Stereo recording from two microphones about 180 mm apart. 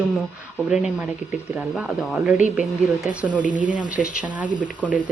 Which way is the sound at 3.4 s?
45° right (ahead or behind).